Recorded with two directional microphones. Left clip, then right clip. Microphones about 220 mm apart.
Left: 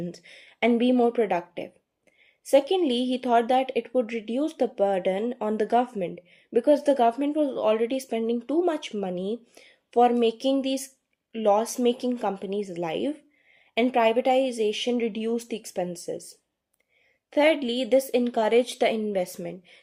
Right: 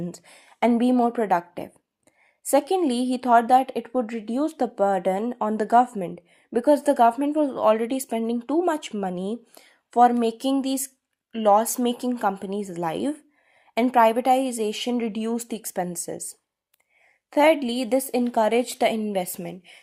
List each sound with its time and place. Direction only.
0.0 s speech: 25° right (ahead or behind)
17.2 s a woman's voice: 30° right (ahead or behind)